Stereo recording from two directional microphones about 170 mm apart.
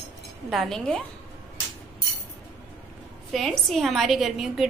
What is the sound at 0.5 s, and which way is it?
Speech, centre (ahead or behind).